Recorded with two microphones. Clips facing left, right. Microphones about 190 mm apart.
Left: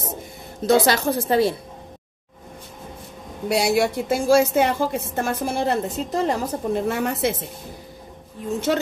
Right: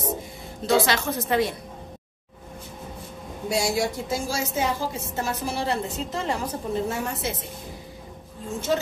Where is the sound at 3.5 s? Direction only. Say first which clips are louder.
Left 5 dB; 65° left (ahead or behind); by 6.4 s 40° left (ahead or behind).